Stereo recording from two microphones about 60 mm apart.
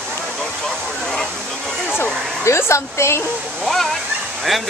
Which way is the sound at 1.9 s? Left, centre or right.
Left.